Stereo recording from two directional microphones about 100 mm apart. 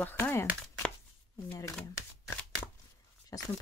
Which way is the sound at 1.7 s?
5° left (ahead or behind).